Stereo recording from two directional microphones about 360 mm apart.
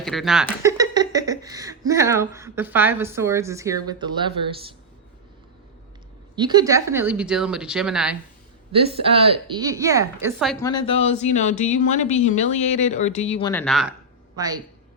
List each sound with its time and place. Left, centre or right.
0.0 s speech: centre
6.3 s speech: centre
8.7 s a woman's voice: centre
13.5 s speech: centre
14.3 s a woman's voice: centre